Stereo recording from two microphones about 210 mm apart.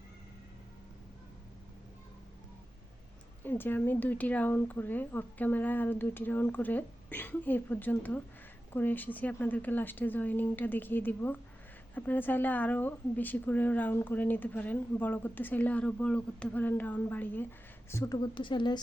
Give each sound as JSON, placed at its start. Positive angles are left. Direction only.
{"t": 3.4, "sound": "a woman's voice", "side_deg": 10}